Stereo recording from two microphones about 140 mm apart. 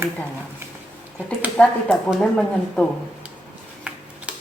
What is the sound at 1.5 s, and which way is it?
A woman's voice, centre (ahead or behind).